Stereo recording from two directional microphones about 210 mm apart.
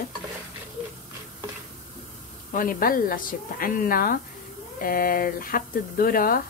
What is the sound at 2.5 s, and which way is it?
Speech, 40° left (ahead or behind).